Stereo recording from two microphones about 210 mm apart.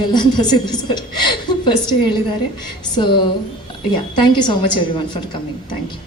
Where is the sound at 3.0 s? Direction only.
20° left (ahead or behind).